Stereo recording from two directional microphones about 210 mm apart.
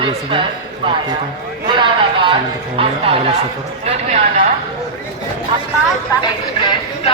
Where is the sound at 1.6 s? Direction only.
20° right (ahead or behind).